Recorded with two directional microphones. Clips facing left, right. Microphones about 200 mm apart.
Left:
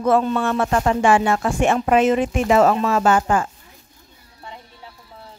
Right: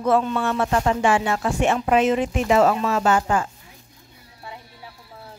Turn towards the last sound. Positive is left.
turn(degrees=50)  # may be behind; listen again after turning